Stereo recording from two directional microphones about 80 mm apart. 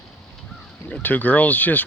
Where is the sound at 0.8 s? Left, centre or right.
Centre.